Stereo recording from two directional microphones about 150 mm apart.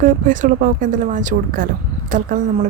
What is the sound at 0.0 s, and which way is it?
Speech, 60° right (ahead or behind).